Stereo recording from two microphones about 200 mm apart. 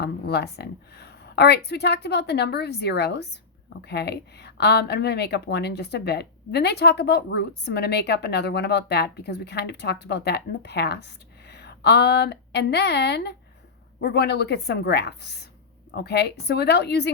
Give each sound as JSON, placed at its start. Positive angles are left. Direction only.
{"t": 0.0, "sound": "speech", "side_deg": 55}